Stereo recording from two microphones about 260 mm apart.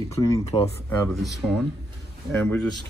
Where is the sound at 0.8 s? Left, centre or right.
Centre.